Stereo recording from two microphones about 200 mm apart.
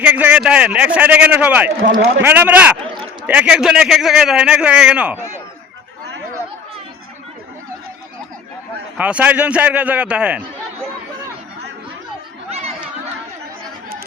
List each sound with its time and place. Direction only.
0.0 s a man's voice: 5° right (ahead or behind)
1.9 s a man's voice: 55° right (ahead or behind)
2.2 s a man's voice: 10° right (ahead or behind)
9.0 s a man's voice: 5° right (ahead or behind)
12.5 s chatter: 30° right (ahead or behind)